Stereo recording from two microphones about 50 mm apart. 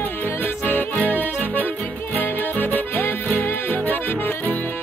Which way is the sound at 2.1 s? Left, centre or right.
Left.